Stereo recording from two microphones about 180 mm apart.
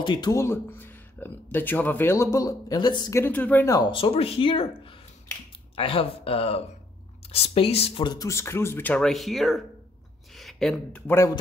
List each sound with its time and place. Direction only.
0.0 s speech: 25° left (ahead or behind)
3.9 s speech: 30° left (ahead or behind); by 11.3 s 15° left (ahead or behind)